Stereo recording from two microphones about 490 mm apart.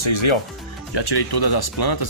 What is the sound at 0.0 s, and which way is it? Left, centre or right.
Speech, left.